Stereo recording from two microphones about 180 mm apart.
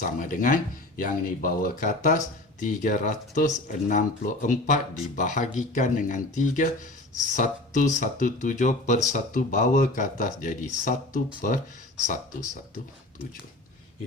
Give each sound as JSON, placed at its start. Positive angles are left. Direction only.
{"t": 0.2, "sound": "speech", "side_deg": 45}